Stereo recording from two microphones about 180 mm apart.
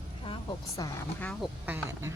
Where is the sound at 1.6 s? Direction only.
10° right (ahead or behind).